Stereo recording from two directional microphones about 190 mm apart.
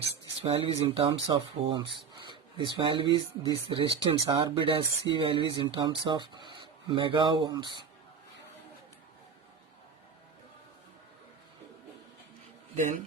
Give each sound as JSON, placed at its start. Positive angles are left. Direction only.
{"t": 0.1, "sound": "speech", "side_deg": -30}
{"t": 12.7, "sound": "a man's voice", "side_deg": -40}